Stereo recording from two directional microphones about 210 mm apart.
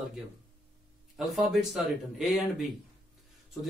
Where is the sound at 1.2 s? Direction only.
Centre (ahead or behind).